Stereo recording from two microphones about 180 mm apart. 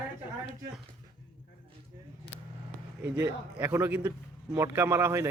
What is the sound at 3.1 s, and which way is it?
A man's voice, 10° right (ahead or behind).